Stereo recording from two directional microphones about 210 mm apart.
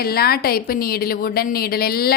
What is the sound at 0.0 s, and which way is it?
A woman's voice, 45° left (ahead or behind).